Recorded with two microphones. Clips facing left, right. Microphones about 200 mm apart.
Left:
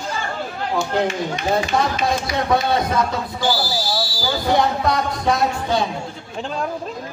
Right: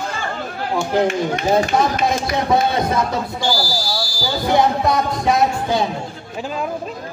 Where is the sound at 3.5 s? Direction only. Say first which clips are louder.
Even; 5° left (ahead or behind).